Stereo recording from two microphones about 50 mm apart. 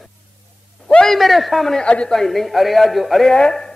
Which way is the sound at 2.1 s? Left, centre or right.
Centre.